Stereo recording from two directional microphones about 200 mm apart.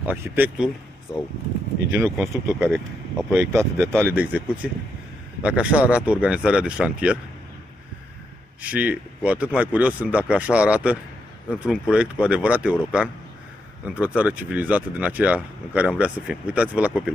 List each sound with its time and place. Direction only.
0.0 s speech: 10° right (ahead or behind)
1.1 s speech: 20° left (ahead or behind)
2.0 s speech: 5° right (ahead or behind)
3.3 s speech: 15° right (ahead or behind)
8.6 s speech: 5° right (ahead or behind)